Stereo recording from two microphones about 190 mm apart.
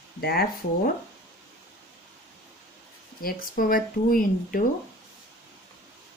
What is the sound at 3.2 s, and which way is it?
Speech, 50° left (ahead or behind).